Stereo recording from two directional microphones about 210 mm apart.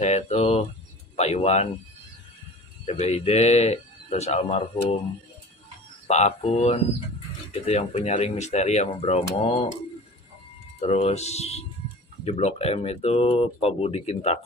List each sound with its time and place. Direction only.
0.0 s speech: 30° left (ahead or behind)
2.8 s speech: 30° left (ahead or behind)
6.0 s speech: 30° left (ahead or behind)
10.8 s speech: 30° left (ahead or behind)